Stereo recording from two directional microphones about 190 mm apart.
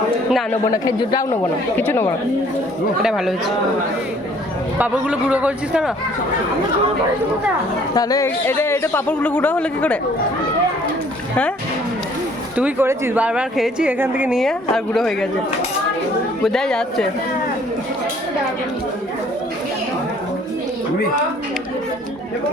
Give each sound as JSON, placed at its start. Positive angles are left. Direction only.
{"t": 0.5, "sound": "a man's voice", "side_deg": 20}
{"t": 3.0, "sound": "speech", "side_deg": 0}
{"t": 4.8, "sound": "a woman's voice", "side_deg": -5}
{"t": 7.9, "sound": "speech", "side_deg": 20}
{"t": 12.5, "sound": "a woman's voice", "side_deg": -10}
{"t": 16.4, "sound": "speech", "side_deg": 0}